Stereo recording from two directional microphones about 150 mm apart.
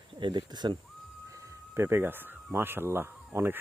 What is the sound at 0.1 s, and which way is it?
Speech, 30° right (ahead or behind).